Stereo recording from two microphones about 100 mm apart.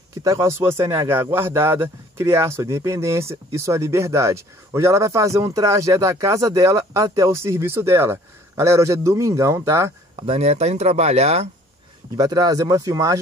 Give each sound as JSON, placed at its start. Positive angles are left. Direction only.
{"t": 0.2, "sound": "a man's voice", "side_deg": -30}
{"t": 10.2, "sound": "speech", "side_deg": -85}
{"t": 12.2, "sound": "speech", "side_deg": -35}